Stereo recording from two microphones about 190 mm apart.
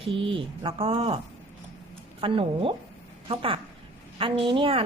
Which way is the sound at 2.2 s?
30° right (ahead or behind).